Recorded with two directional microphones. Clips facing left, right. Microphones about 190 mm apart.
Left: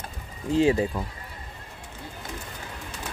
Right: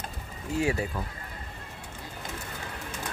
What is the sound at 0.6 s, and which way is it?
Speech, 20° left (ahead or behind).